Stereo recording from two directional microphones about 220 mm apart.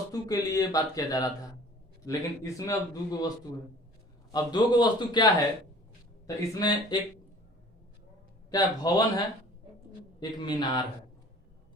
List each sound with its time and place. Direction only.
0.1 s a man's voice: 15° left (ahead or behind)
8.4 s a man's voice: 15° left (ahead or behind)